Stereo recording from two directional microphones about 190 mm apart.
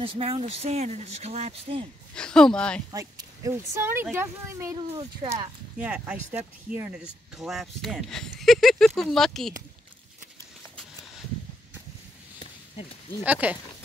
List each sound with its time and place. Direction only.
0.0 s speech: 30° right (ahead or behind)
2.1 s speech: 5° left (ahead or behind)
2.9 s speech: 15° right (ahead or behind)
5.8 s speech: 5° right (ahead or behind)
13.2 s speech: 10° right (ahead or behind)